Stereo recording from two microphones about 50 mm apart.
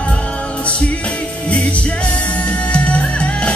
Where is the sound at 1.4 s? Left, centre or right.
Left.